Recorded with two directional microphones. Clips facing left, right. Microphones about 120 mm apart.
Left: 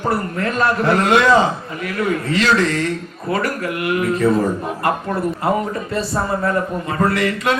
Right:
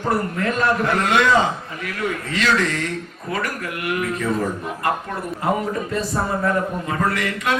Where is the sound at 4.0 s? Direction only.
35° left (ahead or behind).